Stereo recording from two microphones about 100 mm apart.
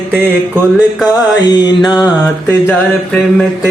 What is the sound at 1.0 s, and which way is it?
Music, 40° left (ahead or behind).